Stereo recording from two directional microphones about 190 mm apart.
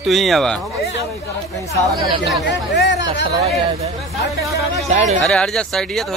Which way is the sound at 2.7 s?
65° left (ahead or behind).